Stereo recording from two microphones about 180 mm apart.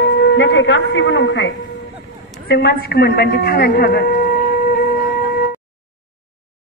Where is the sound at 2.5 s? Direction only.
60° left (ahead or behind).